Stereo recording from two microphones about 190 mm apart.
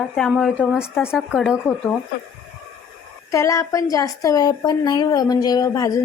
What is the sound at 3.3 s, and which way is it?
A woman's voice, 15° left (ahead or behind).